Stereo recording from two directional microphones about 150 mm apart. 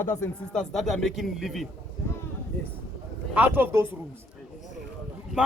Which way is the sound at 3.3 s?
10° right (ahead or behind).